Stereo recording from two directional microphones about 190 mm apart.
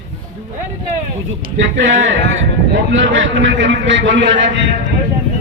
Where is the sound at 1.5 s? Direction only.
80° right.